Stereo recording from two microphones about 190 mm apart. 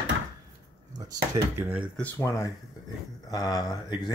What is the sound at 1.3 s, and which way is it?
Speech, 10° right (ahead or behind).